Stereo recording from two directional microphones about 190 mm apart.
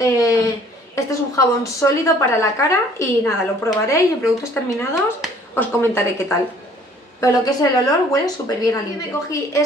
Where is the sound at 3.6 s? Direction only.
15° left (ahead or behind).